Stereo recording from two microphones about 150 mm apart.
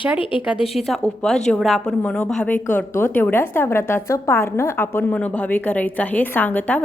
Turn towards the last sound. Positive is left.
turn(degrees=10)  # may be behind; listen again after turning